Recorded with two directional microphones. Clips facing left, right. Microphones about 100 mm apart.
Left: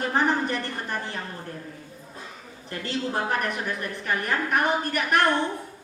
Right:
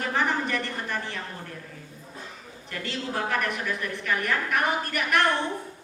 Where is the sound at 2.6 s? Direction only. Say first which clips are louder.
Left 3 dB; 35° left (ahead or behind).